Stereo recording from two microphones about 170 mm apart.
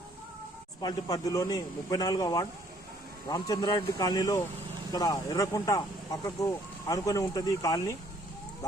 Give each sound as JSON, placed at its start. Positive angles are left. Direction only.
{"t": 0.8, "sound": "speech", "side_deg": 20}